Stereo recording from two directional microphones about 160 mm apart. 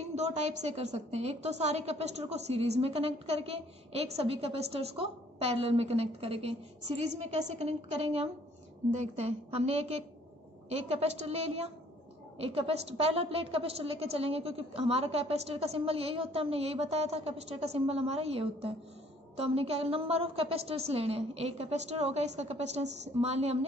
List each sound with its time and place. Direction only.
0.0 s a woman's voice: 40° right (ahead or behind)